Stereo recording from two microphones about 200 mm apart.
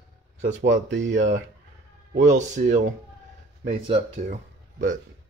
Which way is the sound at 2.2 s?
35° right (ahead or behind).